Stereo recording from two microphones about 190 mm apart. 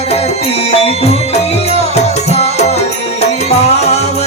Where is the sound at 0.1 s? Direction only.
30° left (ahead or behind).